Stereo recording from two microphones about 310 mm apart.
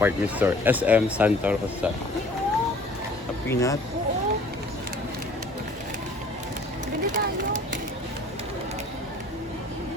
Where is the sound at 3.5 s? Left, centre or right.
Centre.